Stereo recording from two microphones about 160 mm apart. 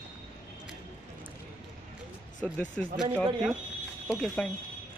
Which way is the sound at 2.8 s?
5° left (ahead or behind).